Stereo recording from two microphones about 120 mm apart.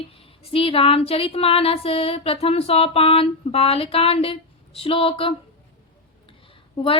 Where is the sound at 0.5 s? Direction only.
50° left (ahead or behind).